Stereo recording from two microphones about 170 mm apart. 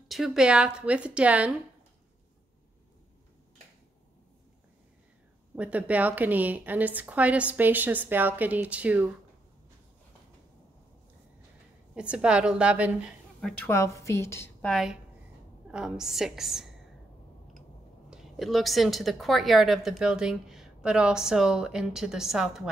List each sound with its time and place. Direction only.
0.1 s a woman's voice: centre (ahead or behind)
5.6 s a woman's voice: 10° right (ahead or behind)
11.9 s a woman's voice: 5° right (ahead or behind)
13.7 s a woman's voice: 15° left (ahead or behind)
14.7 s a woman's voice: centre (ahead or behind)
18.1 s a woman's voice: centre (ahead or behind)